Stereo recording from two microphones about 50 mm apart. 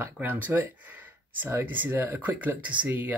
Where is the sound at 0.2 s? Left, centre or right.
Right.